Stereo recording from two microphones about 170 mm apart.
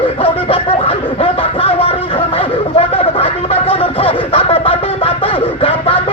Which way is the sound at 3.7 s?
35° left (ahead or behind).